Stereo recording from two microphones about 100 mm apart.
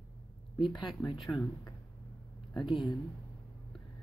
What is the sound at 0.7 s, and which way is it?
Speech, 50° left (ahead or behind).